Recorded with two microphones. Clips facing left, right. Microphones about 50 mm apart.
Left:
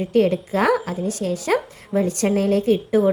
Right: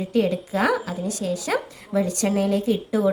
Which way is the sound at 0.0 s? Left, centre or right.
Left.